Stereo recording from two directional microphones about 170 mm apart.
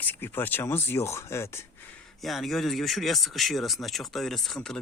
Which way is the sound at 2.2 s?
Centre (ahead or behind).